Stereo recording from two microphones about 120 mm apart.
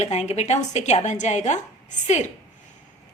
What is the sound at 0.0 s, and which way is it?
A woman's voice, 65° left (ahead or behind).